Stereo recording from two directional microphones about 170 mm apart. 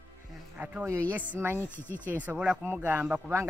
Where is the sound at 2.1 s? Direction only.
10° right (ahead or behind).